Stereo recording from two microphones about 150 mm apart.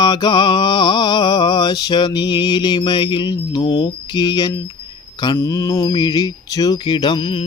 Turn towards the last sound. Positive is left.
turn(degrees=30)  # may be behind; listen again after turning